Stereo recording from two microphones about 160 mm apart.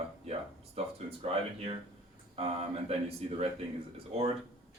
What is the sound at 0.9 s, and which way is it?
Speech, 40° right (ahead or behind).